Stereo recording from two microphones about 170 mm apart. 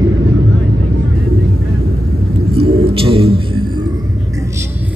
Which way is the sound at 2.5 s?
30° right (ahead or behind).